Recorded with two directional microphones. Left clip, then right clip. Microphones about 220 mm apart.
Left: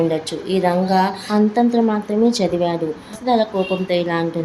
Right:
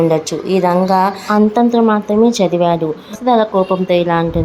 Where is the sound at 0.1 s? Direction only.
20° right (ahead or behind).